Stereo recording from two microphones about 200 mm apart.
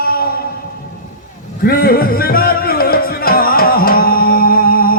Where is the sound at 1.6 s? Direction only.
50° left (ahead or behind).